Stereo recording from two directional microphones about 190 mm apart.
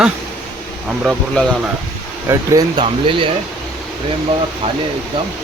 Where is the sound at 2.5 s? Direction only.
25° right (ahead or behind).